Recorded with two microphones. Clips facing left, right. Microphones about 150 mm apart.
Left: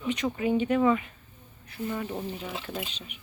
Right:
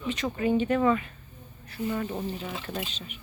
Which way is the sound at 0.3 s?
10° left (ahead or behind).